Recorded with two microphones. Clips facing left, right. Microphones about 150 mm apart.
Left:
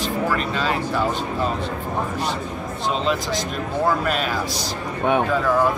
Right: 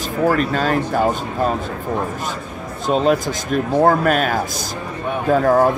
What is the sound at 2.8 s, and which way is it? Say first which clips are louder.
Speech: right 7 dB; 50° right (ahead or behind).